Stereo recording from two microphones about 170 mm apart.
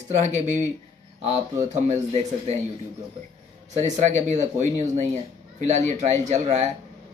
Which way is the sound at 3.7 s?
40° right (ahead or behind).